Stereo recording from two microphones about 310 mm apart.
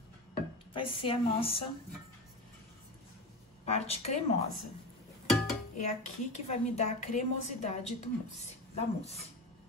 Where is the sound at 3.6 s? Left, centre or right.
Centre.